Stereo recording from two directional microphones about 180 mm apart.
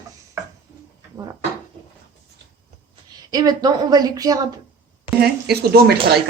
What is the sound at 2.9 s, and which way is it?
A woman's voice, 20° right (ahead or behind).